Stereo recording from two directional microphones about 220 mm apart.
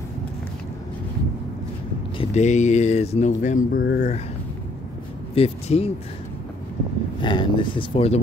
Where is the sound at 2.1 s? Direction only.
30° left (ahead or behind).